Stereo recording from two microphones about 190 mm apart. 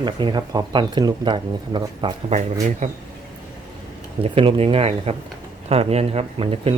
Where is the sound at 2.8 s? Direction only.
40° right (ahead or behind).